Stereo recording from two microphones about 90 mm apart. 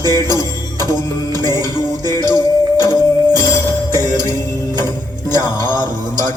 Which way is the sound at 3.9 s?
45° right (ahead or behind).